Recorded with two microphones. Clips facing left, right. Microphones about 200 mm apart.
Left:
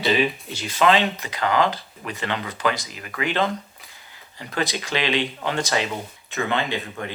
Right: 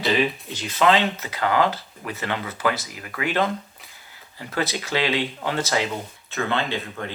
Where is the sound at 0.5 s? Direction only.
10° left (ahead or behind).